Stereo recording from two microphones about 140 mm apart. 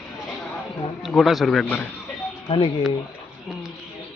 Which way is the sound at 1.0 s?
Centre (ahead or behind).